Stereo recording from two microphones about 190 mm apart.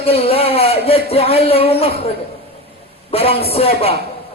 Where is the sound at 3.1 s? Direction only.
30° left (ahead or behind).